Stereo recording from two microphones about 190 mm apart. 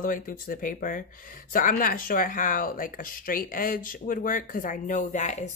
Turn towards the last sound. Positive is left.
turn(degrees=40)  # may be behind; listen again after turning